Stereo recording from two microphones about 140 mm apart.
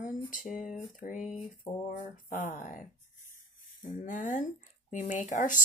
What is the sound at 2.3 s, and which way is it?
Speech, 70° left (ahead or behind).